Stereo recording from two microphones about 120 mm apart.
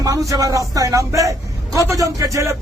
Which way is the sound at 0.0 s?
30° right (ahead or behind).